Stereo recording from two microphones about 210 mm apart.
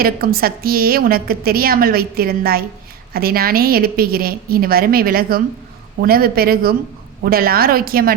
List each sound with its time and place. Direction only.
0.0 s a woman's voice: 45° right (ahead or behind)